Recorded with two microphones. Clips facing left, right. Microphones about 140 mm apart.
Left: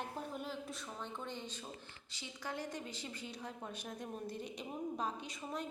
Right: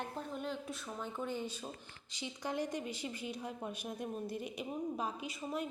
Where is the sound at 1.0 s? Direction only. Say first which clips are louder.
Right 7 dB; 5° right (ahead or behind).